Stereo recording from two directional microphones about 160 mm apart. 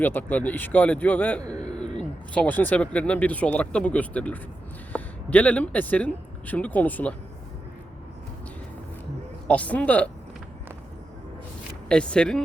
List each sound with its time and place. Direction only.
0.0 s speech: 10° left (ahead or behind)
1.4 s speech: 25° right (ahead or behind)
1.8 s speech: 5° left (ahead or behind)
9.5 s speech: 10° left (ahead or behind)
11.9 s speech: 5° left (ahead or behind)